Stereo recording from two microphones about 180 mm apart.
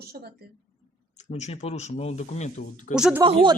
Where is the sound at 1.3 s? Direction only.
35° left (ahead or behind).